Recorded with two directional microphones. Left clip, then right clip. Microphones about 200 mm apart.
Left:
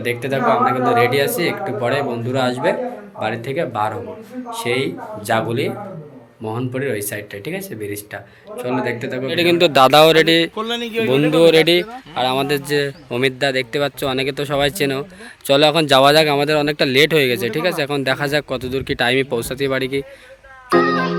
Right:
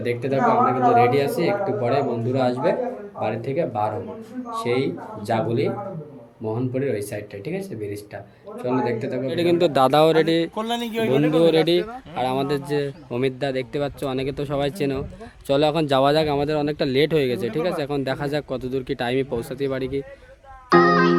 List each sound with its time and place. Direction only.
0.0 s speech: centre (ahead or behind)
10.5 s speech: 60° right (ahead or behind)
11.1 s speech: centre (ahead or behind)
20.7 s music: centre (ahead or behind)